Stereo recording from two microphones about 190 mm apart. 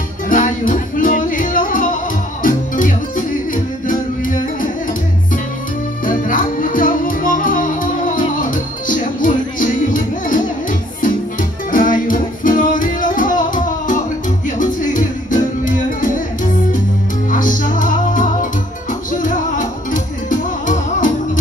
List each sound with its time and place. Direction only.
0.3 s music: 45° left (ahead or behind)
6.0 s music: 45° left (ahead or behind)